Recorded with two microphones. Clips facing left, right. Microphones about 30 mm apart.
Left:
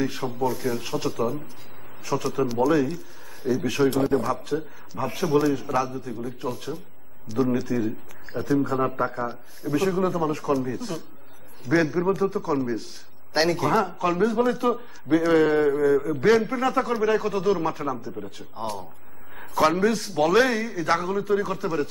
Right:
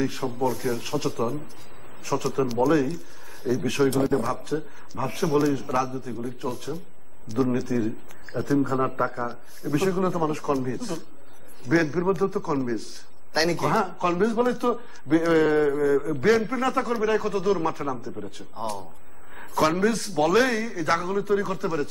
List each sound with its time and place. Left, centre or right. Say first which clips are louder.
0.0 s a man's voice: even; centre